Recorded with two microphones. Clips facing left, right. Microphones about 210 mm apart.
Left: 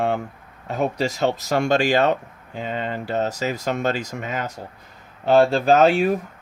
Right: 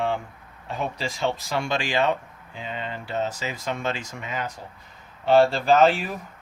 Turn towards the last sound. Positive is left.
turn(degrees=45)  # may be behind; listen again after turning